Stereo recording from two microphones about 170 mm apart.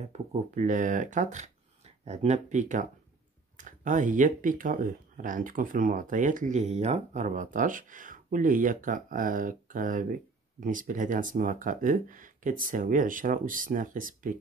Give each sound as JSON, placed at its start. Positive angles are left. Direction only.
{"t": 0.1, "sound": "speech", "side_deg": -45}